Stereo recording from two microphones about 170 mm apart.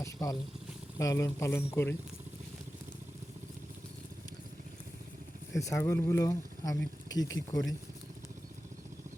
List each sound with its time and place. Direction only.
0.0 s speech: 20° left (ahead or behind)
5.5 s speech: 15° left (ahead or behind)